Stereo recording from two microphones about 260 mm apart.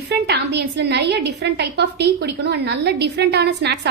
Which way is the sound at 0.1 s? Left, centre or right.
Right.